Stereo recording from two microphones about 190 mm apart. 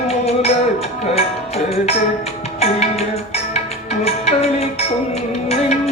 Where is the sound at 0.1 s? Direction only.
35° left (ahead or behind).